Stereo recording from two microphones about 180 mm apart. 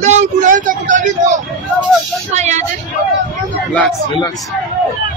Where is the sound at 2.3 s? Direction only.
40° right (ahead or behind).